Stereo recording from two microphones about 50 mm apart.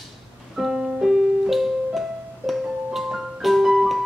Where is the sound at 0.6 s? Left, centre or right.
Centre.